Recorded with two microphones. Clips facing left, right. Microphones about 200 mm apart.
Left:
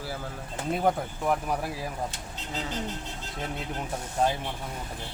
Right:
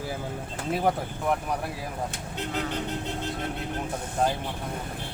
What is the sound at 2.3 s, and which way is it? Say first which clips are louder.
Speech: right 5 dB; 60° right (ahead or behind).